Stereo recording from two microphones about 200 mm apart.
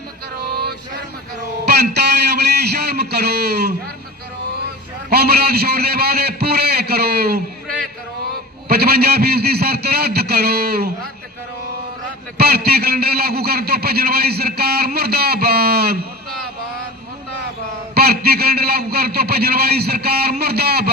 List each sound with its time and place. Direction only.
1.6 s a sound: 55° right (ahead or behind)
5.0 s speech: 50° right (ahead or behind)
8.7 s speech: 50° right (ahead or behind)
12.4 s speech: 50° right (ahead or behind)
17.9 s speech: 50° right (ahead or behind)